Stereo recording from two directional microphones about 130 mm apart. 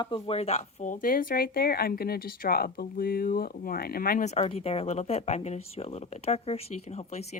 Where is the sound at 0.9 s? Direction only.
90° left.